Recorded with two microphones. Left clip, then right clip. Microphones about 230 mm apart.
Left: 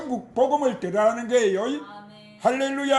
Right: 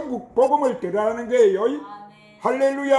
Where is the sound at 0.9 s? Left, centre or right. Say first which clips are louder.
Right 1 dB; left.